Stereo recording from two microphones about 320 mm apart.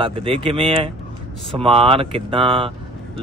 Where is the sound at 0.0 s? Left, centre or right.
Centre.